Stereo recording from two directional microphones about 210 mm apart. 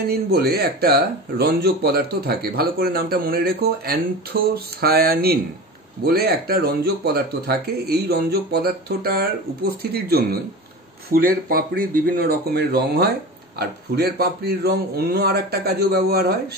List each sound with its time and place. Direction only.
0.1 s speech: 50° right (ahead or behind)